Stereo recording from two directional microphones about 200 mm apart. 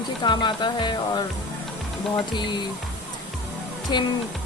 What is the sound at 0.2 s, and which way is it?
A woman's voice, 20° left (ahead or behind).